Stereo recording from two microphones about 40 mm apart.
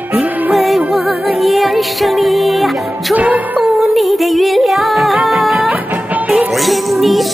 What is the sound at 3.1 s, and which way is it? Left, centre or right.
Music, right.